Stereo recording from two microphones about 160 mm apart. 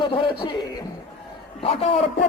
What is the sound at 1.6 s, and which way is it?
Speech, 40° left (ahead or behind).